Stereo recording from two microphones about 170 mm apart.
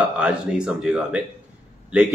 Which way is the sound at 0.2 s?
5° right (ahead or behind).